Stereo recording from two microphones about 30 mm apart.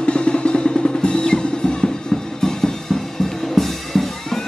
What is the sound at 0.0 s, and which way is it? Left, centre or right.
Music, left.